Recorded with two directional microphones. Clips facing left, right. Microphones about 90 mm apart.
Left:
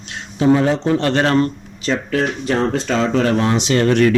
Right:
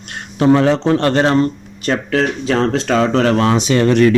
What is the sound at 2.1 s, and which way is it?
Speech, 90° right.